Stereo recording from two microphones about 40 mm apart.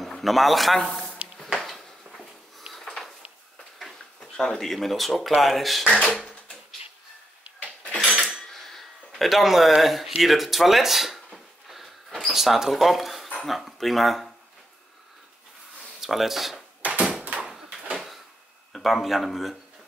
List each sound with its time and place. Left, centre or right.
0.0 s speech: centre
1.4 s a sound: centre
4.2 s speech: centre
5.9 s a sound: left
7.6 s dishes: left
8.5 s speech: centre
11.3 s a sound: centre
12.3 s speech: centre
16.0 s speech: centre
16.8 s door: right
17.9 s a sound: centre
18.7 s speech: centre